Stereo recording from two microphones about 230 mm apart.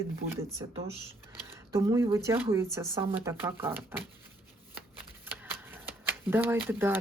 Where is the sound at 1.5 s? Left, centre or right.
Centre.